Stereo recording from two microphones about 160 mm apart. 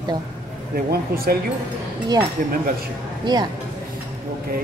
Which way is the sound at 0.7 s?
70° right (ahead or behind).